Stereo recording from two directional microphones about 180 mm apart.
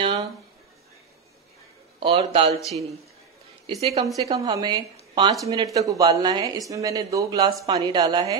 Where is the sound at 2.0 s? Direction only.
30° right (ahead or behind).